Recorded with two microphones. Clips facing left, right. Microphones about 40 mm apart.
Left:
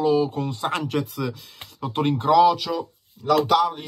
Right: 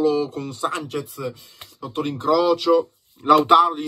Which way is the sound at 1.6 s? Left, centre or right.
Left.